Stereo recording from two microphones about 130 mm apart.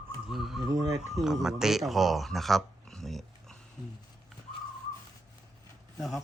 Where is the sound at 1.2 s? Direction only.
5° right (ahead or behind).